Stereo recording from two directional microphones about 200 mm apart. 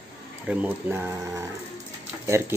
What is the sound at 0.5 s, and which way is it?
Speech, 10° right (ahead or behind).